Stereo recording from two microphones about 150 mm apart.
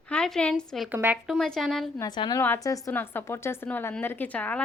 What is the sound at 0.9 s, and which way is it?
Speech, 10° right (ahead or behind).